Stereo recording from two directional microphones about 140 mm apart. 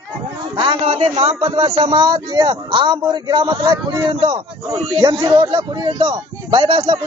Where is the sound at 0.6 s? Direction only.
40° right (ahead or behind).